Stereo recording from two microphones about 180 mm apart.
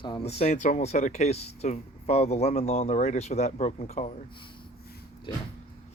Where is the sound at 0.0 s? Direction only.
30° left (ahead or behind).